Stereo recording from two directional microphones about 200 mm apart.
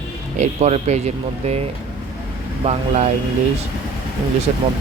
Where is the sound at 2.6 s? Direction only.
35° right (ahead or behind).